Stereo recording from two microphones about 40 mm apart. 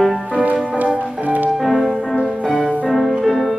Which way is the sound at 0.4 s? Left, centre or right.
Right.